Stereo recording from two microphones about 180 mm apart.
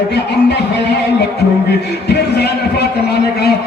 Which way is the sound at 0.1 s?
70° left (ahead or behind).